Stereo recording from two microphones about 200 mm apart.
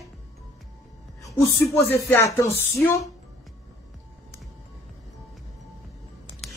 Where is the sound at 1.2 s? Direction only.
15° left (ahead or behind).